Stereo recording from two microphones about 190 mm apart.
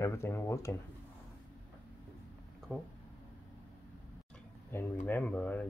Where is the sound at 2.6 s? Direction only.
Centre (ahead or behind).